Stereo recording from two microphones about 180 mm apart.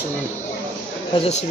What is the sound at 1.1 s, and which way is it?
Speech, 40° left (ahead or behind).